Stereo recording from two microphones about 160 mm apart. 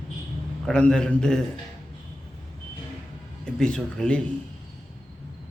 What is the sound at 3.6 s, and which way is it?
Speech, 5° left (ahead or behind).